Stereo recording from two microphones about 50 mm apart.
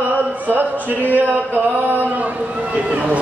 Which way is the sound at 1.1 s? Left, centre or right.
Right.